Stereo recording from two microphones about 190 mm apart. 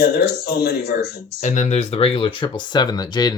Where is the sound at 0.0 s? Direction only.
55° left (ahead or behind).